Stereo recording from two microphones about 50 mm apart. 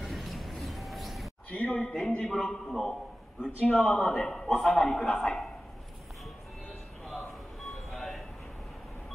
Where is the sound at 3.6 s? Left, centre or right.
Centre.